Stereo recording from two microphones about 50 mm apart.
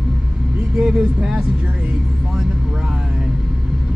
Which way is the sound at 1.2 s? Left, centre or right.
Centre.